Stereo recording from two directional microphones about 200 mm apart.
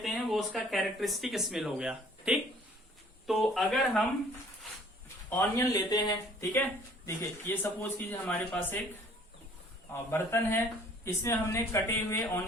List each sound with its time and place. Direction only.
0.0 s speech: centre (ahead or behind)
5.3 s speech: 15° left (ahead or behind)
9.9 s speech: 10° left (ahead or behind)